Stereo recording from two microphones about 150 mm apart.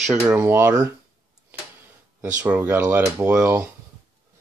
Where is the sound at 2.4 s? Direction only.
15° right (ahead or behind).